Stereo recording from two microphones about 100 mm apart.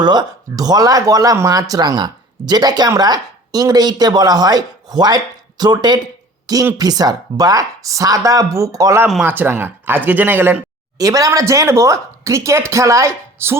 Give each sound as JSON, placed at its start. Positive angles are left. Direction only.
{"t": 0.0, "sound": "speech", "side_deg": -45}
{"t": 9.2, "sound": "speech", "side_deg": -20}
{"t": 10.9, "sound": "speech", "side_deg": -35}